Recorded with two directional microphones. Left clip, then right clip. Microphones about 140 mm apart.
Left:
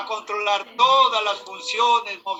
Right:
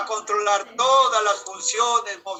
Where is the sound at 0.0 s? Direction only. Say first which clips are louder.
Right 2 dB; 70° right (ahead or behind).